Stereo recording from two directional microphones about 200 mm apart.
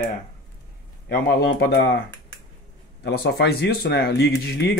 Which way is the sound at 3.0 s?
55° left (ahead or behind).